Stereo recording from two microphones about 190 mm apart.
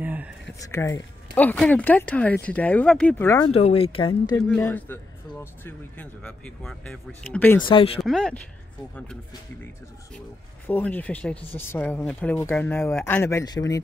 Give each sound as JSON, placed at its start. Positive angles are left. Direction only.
{"t": 0.0, "sound": "a sound", "side_deg": -10}
{"t": 0.7, "sound": "speech", "side_deg": 15}
{"t": 3.3, "sound": "speech", "side_deg": 20}
{"t": 4.6, "sound": "speech", "side_deg": 10}
{"t": 7.6, "sound": "speech", "side_deg": 30}
{"t": 8.0, "sound": "speech", "side_deg": 5}
{"t": 10.7, "sound": "speech", "side_deg": 10}